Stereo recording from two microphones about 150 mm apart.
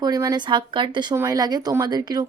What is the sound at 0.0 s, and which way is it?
A woman's voice, 25° right (ahead or behind).